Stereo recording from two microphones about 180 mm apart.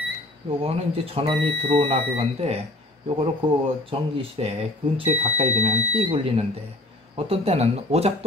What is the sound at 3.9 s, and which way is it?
Speech, 30° right (ahead or behind).